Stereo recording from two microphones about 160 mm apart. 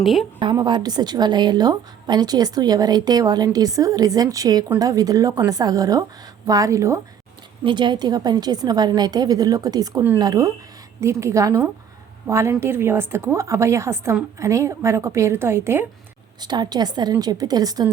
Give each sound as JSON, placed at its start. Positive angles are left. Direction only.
{"t": 0.0, "sound": "a woman's voice", "side_deg": 0}
{"t": 0.3, "sound": "a woman's voice", "side_deg": -30}
{"t": 7.6, "sound": "a woman's voice", "side_deg": -30}
{"t": 16.4, "sound": "a woman's voice", "side_deg": -25}